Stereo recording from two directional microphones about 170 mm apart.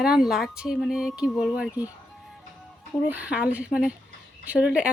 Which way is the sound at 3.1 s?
10° right (ahead or behind).